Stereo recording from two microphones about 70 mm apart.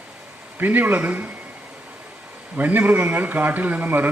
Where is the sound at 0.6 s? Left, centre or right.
Right.